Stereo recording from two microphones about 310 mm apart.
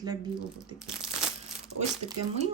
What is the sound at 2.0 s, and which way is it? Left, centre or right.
Speech, centre.